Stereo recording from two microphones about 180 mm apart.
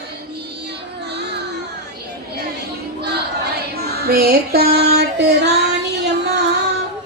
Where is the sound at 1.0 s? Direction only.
65° right (ahead or behind).